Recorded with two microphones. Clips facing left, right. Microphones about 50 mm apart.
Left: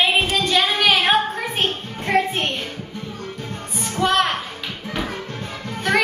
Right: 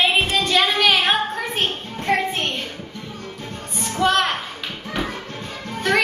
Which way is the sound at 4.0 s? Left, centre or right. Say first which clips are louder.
Even; centre.